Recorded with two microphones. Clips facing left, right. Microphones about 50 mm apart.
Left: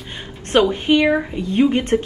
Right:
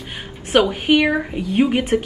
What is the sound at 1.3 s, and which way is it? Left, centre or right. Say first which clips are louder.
Speech: left 1 dB; centre.